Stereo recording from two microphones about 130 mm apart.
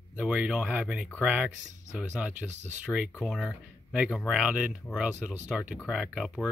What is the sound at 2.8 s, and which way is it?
Speech, 5° right (ahead or behind).